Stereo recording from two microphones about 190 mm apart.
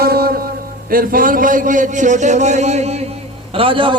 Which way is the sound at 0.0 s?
55° right (ahead or behind).